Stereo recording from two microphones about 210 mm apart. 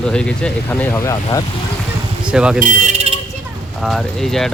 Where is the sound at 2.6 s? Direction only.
35° right (ahead or behind).